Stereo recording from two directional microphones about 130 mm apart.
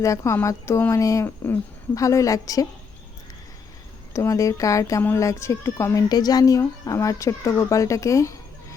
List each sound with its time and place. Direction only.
0.0 s speech: 25° left (ahead or behind)
4.1 s speech: 25° left (ahead or behind)